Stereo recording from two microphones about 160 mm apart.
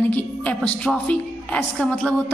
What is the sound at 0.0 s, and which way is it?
A woman's voice, 10° left (ahead or behind).